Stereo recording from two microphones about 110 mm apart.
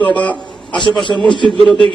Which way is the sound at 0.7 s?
45° left (ahead or behind).